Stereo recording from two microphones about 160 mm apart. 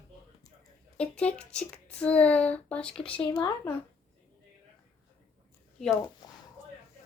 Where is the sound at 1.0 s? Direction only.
5° left (ahead or behind).